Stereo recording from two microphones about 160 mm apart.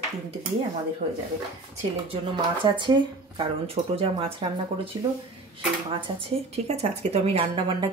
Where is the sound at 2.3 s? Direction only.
30° right (ahead or behind).